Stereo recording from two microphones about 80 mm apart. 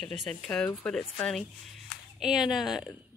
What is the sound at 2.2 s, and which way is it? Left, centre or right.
Speech, centre.